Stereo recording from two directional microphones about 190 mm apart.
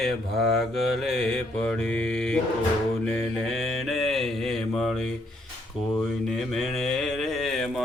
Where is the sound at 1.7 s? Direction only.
5° left (ahead or behind).